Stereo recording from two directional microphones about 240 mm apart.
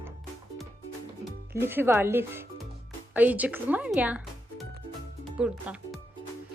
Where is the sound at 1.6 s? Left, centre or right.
Centre.